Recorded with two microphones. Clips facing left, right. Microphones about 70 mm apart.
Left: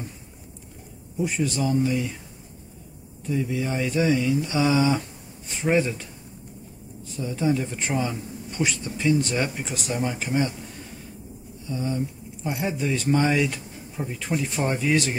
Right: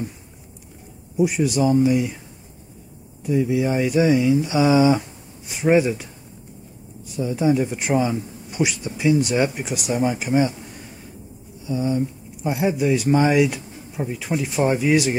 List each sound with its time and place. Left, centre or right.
1.1 s speech: centre
3.3 s speech: centre
7.2 s speech: centre
11.6 s speech: centre